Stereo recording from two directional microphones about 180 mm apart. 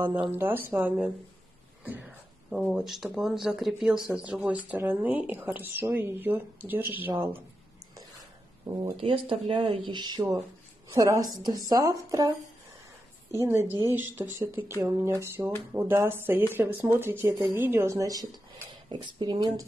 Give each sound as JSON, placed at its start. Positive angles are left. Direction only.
{"t": 0.0, "sound": "speech", "side_deg": -10}
{"t": 8.6, "sound": "speech", "side_deg": -20}
{"t": 13.4, "sound": "speech", "side_deg": -15}